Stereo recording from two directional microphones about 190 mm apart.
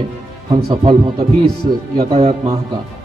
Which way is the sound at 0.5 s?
20° right (ahead or behind).